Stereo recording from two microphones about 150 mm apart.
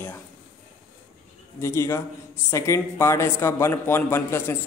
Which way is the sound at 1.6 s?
20° left (ahead or behind).